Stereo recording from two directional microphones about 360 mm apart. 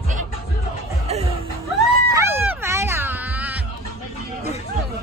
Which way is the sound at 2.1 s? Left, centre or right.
Centre.